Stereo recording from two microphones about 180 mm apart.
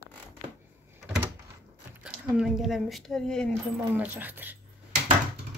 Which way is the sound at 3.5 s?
10° right (ahead or behind).